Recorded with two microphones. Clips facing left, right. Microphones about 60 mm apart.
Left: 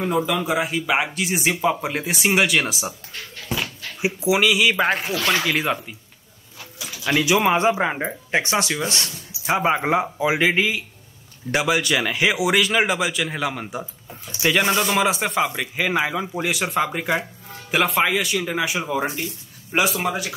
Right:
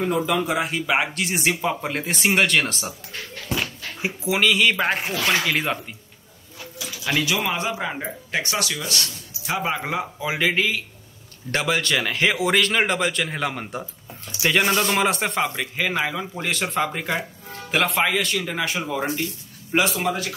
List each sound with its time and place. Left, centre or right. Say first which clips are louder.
0.0 s speech: even; centre
4.0 s speech: left 3 dB; centre
7.1 s a man's voice: left 5 dB; left